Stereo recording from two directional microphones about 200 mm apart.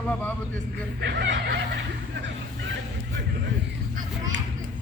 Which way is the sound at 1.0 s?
60° right (ahead or behind).